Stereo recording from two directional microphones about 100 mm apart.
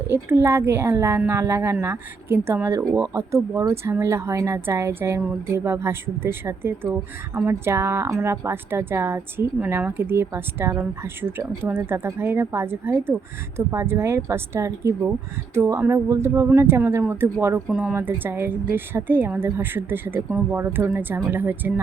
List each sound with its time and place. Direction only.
0.1 s a woman's voice: 25° right (ahead or behind)